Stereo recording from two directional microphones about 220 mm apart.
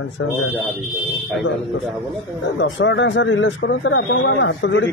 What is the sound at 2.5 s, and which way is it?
Speech, 55° left (ahead or behind).